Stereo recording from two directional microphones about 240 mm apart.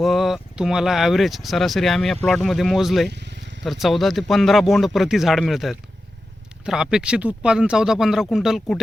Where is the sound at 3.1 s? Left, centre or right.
Right.